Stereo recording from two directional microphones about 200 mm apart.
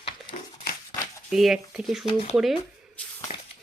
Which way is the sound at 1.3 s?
Centre (ahead or behind).